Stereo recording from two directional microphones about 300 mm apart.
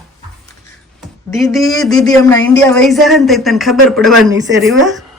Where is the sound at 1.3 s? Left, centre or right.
Centre.